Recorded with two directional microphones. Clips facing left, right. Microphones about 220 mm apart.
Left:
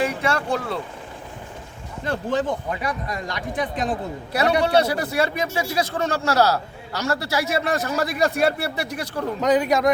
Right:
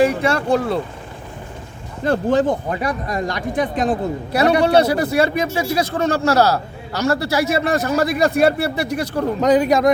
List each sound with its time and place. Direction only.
0.0 s speech: 35° right (ahead or behind)
2.0 s speech: 40° right (ahead or behind)